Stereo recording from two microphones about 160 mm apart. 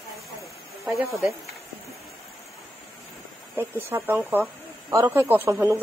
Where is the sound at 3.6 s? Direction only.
15° right (ahead or behind).